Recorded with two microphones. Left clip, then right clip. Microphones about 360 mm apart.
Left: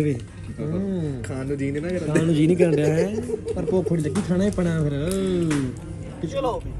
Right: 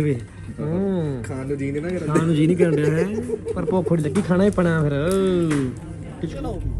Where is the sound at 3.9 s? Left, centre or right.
Right.